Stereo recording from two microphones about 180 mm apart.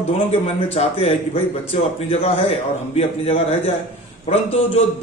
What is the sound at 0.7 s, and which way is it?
A man's voice, 35° left (ahead or behind).